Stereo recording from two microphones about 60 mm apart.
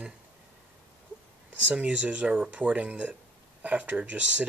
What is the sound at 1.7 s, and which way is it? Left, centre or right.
Speech, centre.